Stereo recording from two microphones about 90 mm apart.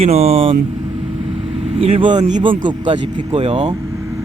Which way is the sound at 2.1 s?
65° right (ahead or behind).